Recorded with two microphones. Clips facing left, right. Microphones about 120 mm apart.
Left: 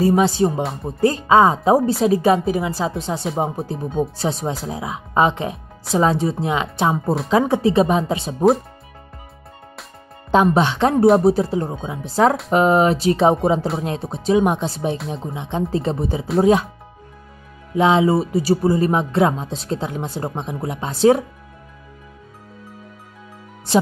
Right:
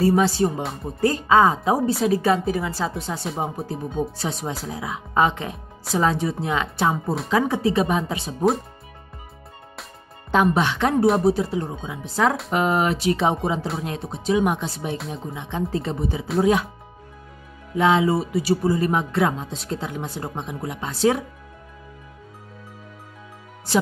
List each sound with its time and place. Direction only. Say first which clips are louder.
0.0 s a woman's voice: left 3 dB; 20° left (ahead or behind)
10.3 s speech: left 4 dB; 25° left (ahead or behind)
17.7 s speech: left 3 dB; 25° left (ahead or behind)